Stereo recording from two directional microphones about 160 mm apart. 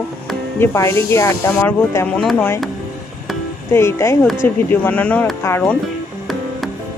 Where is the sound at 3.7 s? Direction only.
15° left (ahead or behind).